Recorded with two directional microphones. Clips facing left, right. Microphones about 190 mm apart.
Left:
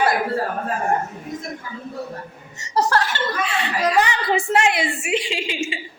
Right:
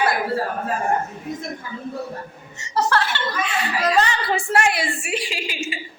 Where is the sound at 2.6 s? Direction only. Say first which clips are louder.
Left 1 dB; 40° left (ahead or behind).